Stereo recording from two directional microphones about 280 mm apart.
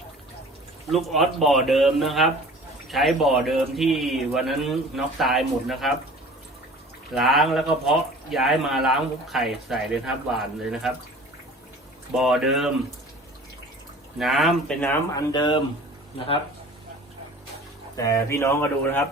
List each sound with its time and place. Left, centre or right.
0.9 s speech: centre
7.1 s speech: centre
12.1 s speech: centre
14.2 s speech: centre
17.9 s speech: centre